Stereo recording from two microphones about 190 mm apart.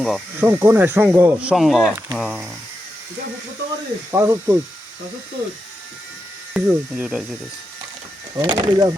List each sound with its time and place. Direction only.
0.0 s speech: centre (ahead or behind)
0.4 s speech: 10° right (ahead or behind)
4.1 s speech: 15° right (ahead or behind)
6.5 s speech: 5° right (ahead or behind)
8.4 s speech: 20° right (ahead or behind)